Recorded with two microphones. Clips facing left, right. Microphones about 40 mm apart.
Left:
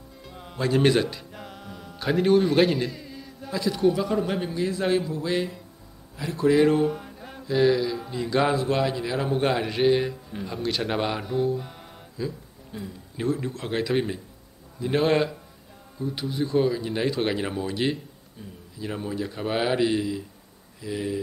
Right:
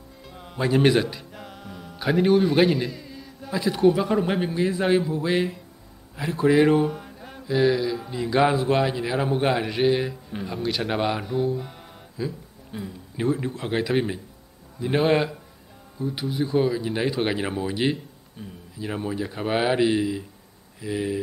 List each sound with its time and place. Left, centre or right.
0.2 s music: centre
0.6 s a sound: centre
3.5 s a man's voice: centre
6.9 s mantra: centre
8.6 s speech: centre
12.7 s speech: centre